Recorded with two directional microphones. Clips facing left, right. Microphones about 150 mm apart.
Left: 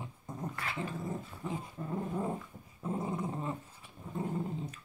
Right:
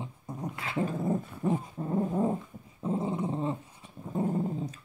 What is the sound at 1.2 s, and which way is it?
Dog, 55° right (ahead or behind).